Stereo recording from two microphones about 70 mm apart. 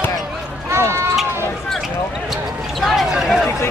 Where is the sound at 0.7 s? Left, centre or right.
Right.